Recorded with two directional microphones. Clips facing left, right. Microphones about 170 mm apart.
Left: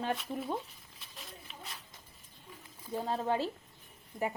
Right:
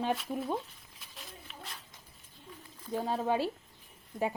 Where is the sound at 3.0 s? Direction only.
15° right (ahead or behind).